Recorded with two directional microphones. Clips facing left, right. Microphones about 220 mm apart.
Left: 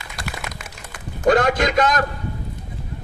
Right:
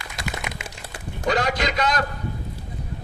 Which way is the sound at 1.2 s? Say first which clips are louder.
Left 6 dB; 50° left (ahead or behind).